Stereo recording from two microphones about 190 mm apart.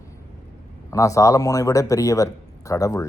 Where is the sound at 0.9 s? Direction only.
15° left (ahead or behind).